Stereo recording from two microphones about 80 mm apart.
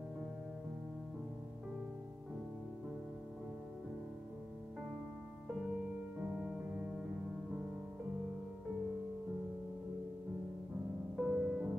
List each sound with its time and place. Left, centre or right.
6.3 s music: centre
11.1 s music: centre